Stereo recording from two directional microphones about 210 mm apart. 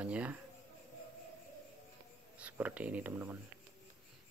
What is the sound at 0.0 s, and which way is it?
Speech, 5° right (ahead or behind).